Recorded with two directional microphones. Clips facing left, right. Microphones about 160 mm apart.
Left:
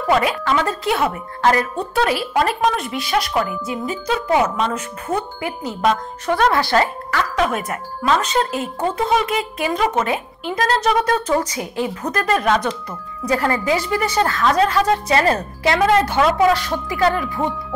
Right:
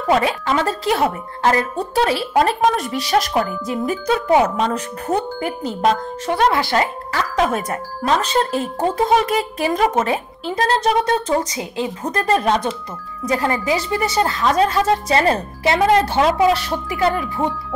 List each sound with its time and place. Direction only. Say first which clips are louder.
0.1 s speech: even; 30° right (ahead or behind); by 4.2 s 50° right (ahead or behind)
4.3 s speech: right 2 dB; 35° right (ahead or behind)
6.2 s a woman's voice: even; 20° right (ahead or behind)
7.3 s a woman's voice: right 4 dB; 35° right (ahead or behind); by 17.3 s 20° right (ahead or behind)